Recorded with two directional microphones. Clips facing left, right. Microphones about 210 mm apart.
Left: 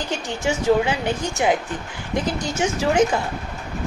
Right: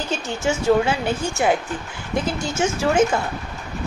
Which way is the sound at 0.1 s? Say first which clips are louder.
Right 1 dB; 15° left (ahead or behind).